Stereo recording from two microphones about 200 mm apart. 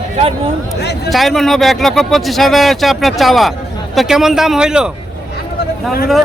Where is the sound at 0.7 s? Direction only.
55° left (ahead or behind).